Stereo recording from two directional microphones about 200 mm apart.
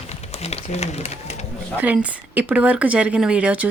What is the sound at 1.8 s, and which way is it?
Speech, 5° right (ahead or behind).